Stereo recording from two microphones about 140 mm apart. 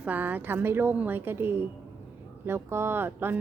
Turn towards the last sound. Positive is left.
turn(degrees=-15)  # may be behind; listen again after turning